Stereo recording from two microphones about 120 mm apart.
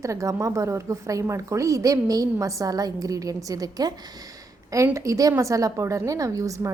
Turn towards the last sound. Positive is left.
turn(degrees=-25)  # may be behind; listen again after turning